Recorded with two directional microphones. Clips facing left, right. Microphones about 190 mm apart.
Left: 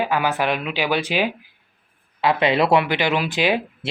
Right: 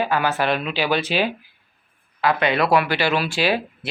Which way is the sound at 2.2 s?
25° left (ahead or behind).